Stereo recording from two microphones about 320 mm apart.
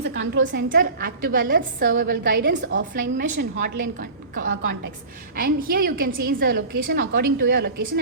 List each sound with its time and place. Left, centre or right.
0.0 s a woman's voice: right
4.4 s a woman's voice: right